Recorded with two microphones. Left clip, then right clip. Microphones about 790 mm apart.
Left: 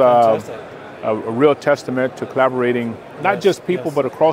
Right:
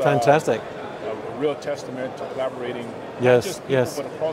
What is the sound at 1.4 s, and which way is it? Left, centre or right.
Speech, left.